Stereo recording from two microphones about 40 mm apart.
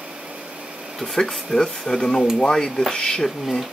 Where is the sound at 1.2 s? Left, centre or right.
Centre.